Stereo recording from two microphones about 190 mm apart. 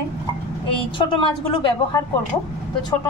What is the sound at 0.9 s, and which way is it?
A woman's voice, 25° left (ahead or behind).